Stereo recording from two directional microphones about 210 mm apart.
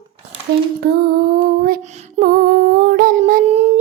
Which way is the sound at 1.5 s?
40° right (ahead or behind).